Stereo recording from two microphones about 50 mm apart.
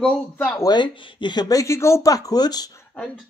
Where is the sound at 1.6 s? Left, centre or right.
Left.